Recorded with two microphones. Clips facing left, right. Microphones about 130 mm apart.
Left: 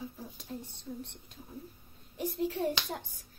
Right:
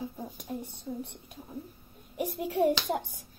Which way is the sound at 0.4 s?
15° right (ahead or behind).